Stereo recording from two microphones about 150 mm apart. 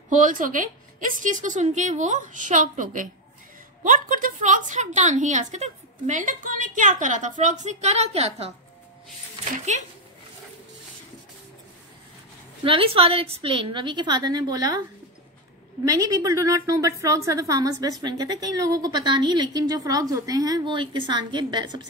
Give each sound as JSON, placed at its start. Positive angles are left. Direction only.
{"t": 0.1, "sound": "a woman's voice", "side_deg": -60}
{"t": 9.7, "sound": "speech", "side_deg": -50}
{"t": 12.6, "sound": "a woman's voice", "side_deg": -35}
{"t": 15.8, "sound": "a woman's voice", "side_deg": -25}